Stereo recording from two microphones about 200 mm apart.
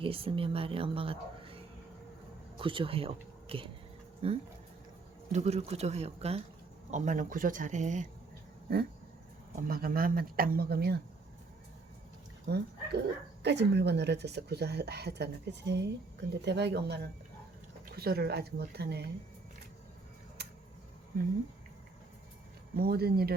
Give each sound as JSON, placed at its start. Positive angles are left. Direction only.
{"t": 0.0, "sound": "speech", "side_deg": -25}
{"t": 9.6, "sound": "speech", "side_deg": -45}
{"t": 12.5, "sound": "a woman's voice", "side_deg": -55}
{"t": 22.7, "sound": "speech", "side_deg": -50}